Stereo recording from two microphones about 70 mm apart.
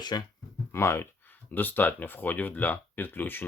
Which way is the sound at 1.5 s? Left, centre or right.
Left.